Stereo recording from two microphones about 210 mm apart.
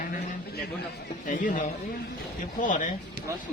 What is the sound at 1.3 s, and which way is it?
Speech, 40° left (ahead or behind).